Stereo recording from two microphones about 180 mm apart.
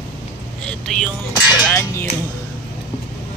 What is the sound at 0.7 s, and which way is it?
Speech, 5° left (ahead or behind).